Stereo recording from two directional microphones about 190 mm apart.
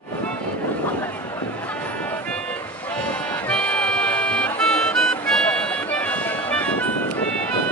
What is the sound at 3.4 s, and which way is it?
Music, 5° left (ahead or behind).